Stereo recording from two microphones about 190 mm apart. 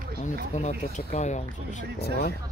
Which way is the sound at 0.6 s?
35° left (ahead or behind).